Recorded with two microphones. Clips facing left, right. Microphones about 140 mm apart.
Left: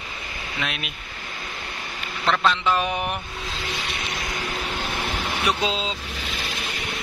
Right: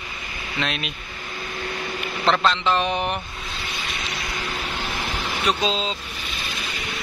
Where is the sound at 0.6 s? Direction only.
10° left (ahead or behind).